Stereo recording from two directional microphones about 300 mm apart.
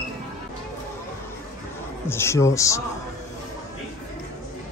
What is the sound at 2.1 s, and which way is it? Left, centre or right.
Speech, centre.